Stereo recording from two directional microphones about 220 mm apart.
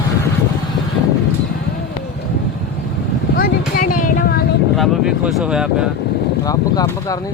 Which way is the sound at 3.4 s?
40° left (ahead or behind).